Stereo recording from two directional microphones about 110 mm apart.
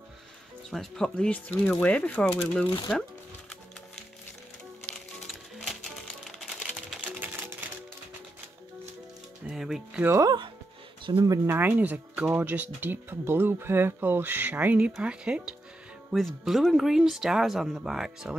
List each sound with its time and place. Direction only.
0.7 s speech: 5° left (ahead or behind)
5.2 s music: centre (ahead or behind)
7.0 s music: 15° right (ahead or behind)
9.5 s speech: 5° right (ahead or behind)
10.0 s speech: 30° right (ahead or behind)
11.1 s speech: 45° right (ahead or behind)
11.4 s speech: 20° right (ahead or behind)